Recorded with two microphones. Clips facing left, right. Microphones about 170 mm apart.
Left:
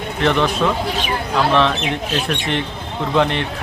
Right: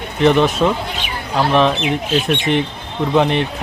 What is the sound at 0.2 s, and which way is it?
Speech, 20° right (ahead or behind).